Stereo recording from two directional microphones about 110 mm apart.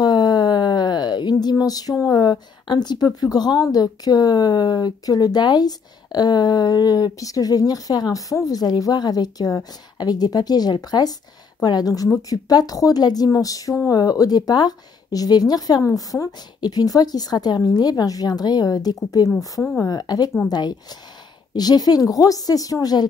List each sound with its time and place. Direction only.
0.0 s a sound: 40° left (ahead or behind)
3.2 s speech: 40° left (ahead or behind)
19.6 s speech: 20° left (ahead or behind)
19.9 s speech: 35° left (ahead or behind)